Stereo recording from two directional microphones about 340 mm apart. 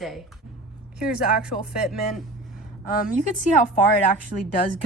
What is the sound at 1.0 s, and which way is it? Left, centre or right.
Speech, left.